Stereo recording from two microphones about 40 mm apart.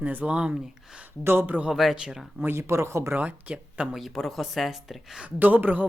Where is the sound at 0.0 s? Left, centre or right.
Right.